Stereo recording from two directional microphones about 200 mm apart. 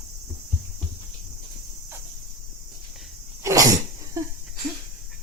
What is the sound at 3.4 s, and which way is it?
Sneeze, 15° right (ahead or behind).